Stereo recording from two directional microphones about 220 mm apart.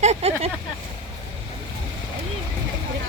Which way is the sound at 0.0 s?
30° right (ahead or behind).